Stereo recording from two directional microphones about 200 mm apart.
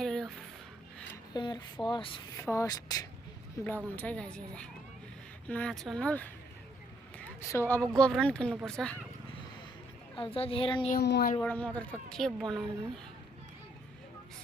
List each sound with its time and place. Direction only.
0.0 s a sound: centre (ahead or behind)
1.1 s a sound: 20° left (ahead or behind)
1.9 s a woman's voice: 25° left (ahead or behind)
2.4 s speech: 15° left (ahead or behind)
3.9 s speech: 5° left (ahead or behind)
10.2 s a woman's voice: 25° left (ahead or behind)
10.9 s speech: 55° left (ahead or behind)
11.3 s speech: 5° left (ahead or behind)